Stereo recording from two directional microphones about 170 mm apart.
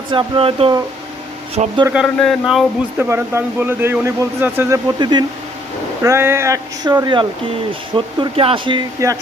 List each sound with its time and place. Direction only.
0.1 s speech: 30° right (ahead or behind)
1.9 s speech: centre (ahead or behind)
3.0 s speech: 15° right (ahead or behind)
4.9 s speech: 25° right (ahead or behind)
6.0 s speech: 15° right (ahead or behind)
9.0 s speech: 20° right (ahead or behind)